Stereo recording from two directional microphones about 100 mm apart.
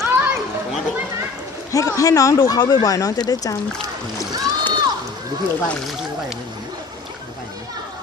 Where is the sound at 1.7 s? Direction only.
35° left (ahead or behind).